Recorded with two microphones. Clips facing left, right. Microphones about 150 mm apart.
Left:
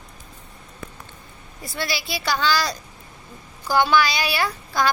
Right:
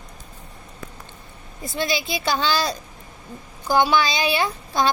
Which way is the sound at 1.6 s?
20° right (ahead or behind).